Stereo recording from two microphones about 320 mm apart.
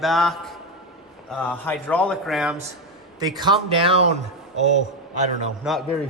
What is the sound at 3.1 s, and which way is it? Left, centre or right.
A man's voice, centre.